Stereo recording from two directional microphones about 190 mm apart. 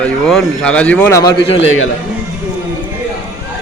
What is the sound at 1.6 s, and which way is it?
Speech, 90° left.